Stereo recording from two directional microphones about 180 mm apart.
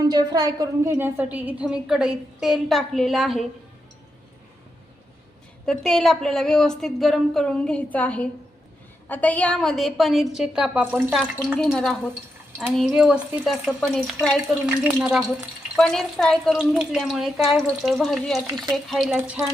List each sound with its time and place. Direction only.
0.0 s a woman's voice: 20° right (ahead or behind); by 3.4 s centre (ahead or behind)
5.6 s a woman's voice: centre (ahead or behind)
18.4 s speech: 25° right (ahead or behind)
18.9 s a woman's voice: centre (ahead or behind)
19.1 s speech: 10° right (ahead or behind)